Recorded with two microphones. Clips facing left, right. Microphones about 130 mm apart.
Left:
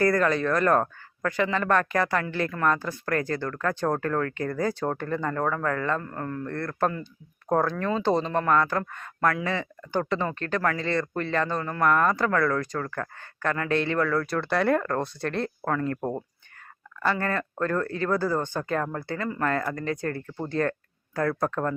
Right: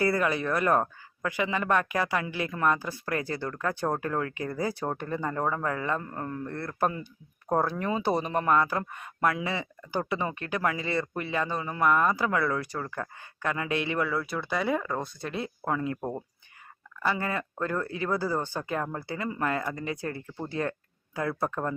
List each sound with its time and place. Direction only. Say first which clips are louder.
0.0 s speech: left 4 dB; 10° right (ahead or behind)
16.0 s speech: left 4 dB; 10° left (ahead or behind)
17.1 s speech: left 3 dB; 10° right (ahead or behind)